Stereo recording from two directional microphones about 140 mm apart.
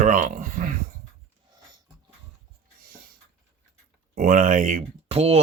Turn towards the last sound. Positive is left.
turn(degrees=-50)  # may be behind; listen again after turning